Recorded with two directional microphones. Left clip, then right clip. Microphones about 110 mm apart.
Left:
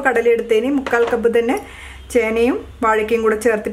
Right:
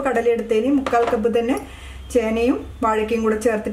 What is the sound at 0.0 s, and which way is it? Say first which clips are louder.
A woman's voice: left 4 dB; 35° left (ahead or behind).